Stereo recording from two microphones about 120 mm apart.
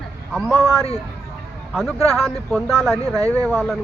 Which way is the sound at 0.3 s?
Centre (ahead or behind).